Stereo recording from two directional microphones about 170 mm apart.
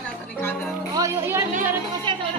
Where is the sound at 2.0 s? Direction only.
30° right (ahead or behind).